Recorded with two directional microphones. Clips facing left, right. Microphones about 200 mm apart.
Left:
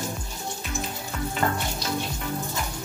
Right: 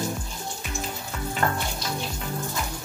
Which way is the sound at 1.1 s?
Centre (ahead or behind).